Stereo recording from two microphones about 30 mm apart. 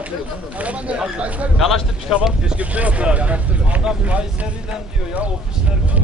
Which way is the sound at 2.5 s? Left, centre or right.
Right.